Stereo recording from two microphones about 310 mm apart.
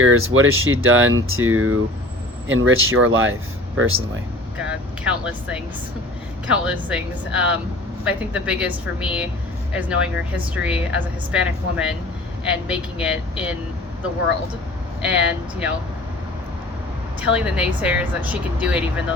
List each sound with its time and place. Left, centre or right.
0.0 s speech: right
4.5 s a woman's voice: centre
15.0 s a woman's voice: centre
17.2 s a woman's voice: centre